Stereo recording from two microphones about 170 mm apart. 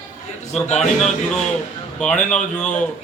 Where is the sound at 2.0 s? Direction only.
5° left (ahead or behind).